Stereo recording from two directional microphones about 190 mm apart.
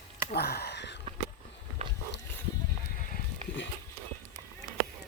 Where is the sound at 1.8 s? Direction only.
35° right (ahead or behind).